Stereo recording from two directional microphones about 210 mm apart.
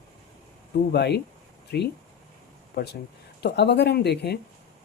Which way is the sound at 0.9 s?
50° left (ahead or behind).